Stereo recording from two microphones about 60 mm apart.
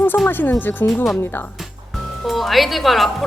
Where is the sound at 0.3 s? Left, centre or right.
Left.